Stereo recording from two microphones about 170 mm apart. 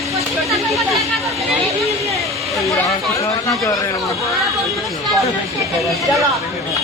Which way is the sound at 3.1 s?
20° left (ahead or behind).